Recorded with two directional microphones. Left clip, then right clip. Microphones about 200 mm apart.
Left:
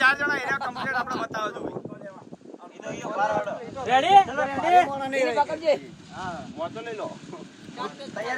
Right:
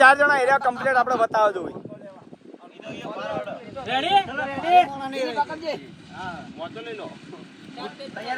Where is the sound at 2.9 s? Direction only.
50° left (ahead or behind).